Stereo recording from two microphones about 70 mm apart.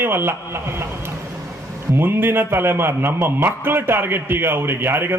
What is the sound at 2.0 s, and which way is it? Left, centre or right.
Speech, right.